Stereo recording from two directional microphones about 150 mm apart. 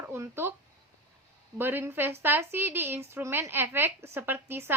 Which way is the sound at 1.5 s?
15° right (ahead or behind).